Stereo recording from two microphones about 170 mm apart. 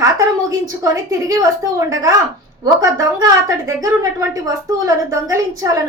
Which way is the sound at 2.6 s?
20° right (ahead or behind).